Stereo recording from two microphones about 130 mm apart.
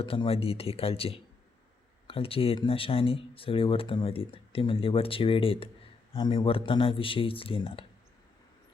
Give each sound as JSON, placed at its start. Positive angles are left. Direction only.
{"t": 0.0, "sound": "speech", "side_deg": 40}